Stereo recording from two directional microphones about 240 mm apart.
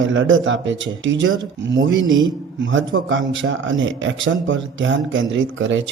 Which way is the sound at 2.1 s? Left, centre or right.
Centre.